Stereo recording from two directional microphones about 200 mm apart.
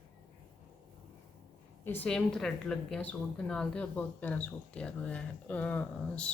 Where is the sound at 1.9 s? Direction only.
5° left (ahead or behind).